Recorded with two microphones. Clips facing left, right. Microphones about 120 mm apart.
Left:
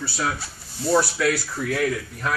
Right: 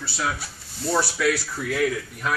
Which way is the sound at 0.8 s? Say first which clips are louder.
Left 2 dB; centre (ahead or behind).